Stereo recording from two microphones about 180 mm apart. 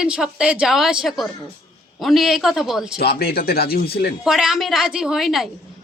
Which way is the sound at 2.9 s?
60° left (ahead or behind).